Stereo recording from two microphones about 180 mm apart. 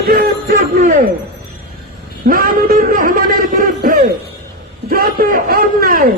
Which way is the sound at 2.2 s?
50° right (ahead or behind).